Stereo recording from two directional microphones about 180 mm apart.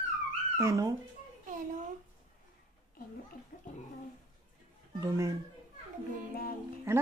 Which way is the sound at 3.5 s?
50° left (ahead or behind).